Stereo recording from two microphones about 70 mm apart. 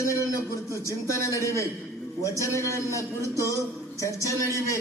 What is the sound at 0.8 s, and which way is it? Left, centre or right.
A man's voice, left.